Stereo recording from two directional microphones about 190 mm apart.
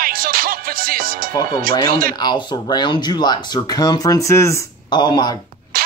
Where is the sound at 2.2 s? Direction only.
20° left (ahead or behind).